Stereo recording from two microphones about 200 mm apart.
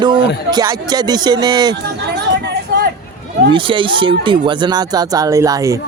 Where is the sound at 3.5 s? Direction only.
25° right (ahead or behind).